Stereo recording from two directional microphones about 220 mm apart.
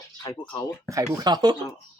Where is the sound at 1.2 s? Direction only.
20° right (ahead or behind).